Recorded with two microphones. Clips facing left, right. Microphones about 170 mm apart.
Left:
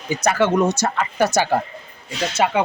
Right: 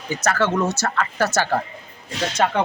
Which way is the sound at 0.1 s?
15° left (ahead or behind).